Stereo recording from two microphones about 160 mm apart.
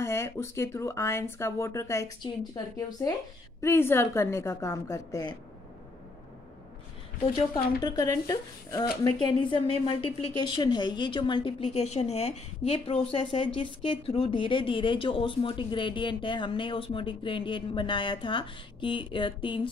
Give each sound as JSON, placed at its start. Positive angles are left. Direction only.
{"t": 0.0, "sound": "speech", "side_deg": 15}
{"t": 7.8, "sound": "speech", "side_deg": 25}
{"t": 11.6, "sound": "speech", "side_deg": 40}